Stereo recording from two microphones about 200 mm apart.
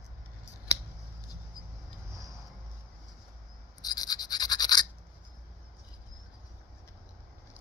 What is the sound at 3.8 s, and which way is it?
Toothbrush, 20° left (ahead or behind).